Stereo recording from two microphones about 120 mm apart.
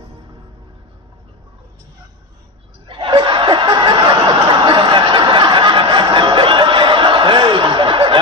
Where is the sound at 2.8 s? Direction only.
45° right (ahead or behind).